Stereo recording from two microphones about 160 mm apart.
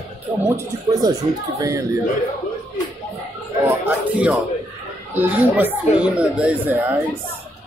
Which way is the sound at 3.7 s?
10° right (ahead or behind).